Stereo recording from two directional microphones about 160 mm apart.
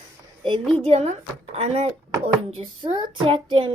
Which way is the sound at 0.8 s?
40° right (ahead or behind).